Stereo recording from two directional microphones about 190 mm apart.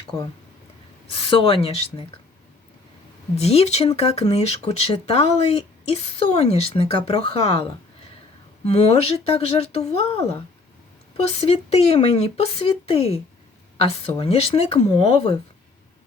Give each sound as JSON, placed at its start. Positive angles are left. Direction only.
{"t": 1.1, "sound": "speech", "side_deg": 30}
{"t": 3.3, "sound": "speech", "side_deg": 35}